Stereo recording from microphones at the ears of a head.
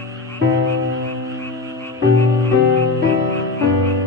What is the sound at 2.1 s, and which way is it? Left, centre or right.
Music, left.